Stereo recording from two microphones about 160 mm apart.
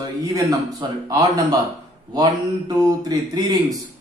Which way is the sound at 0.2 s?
20° right (ahead or behind).